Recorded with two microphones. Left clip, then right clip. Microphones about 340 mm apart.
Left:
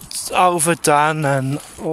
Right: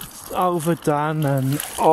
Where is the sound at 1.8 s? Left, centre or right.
Right.